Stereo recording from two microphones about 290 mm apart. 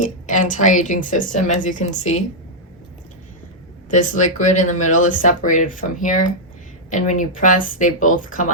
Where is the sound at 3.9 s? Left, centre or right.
Left.